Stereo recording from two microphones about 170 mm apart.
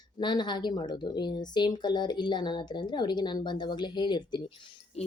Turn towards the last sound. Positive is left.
turn(degrees=40)  # may be behind; listen again after turning